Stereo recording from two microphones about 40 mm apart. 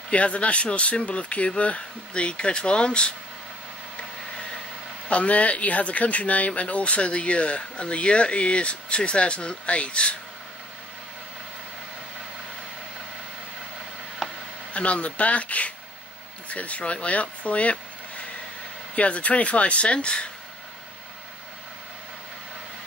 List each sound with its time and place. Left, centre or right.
0.1 s speech: left
5.0 s speech: left
14.2 s a sound: centre
14.7 s speech: left